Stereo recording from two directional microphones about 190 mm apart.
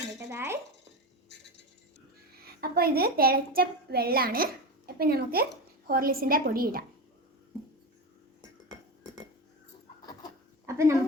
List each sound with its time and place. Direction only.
0.3 s dishes: 15° right (ahead or behind)
2.4 s a child's voice: 55° right (ahead or behind)
10.7 s a sound: 15° right (ahead or behind)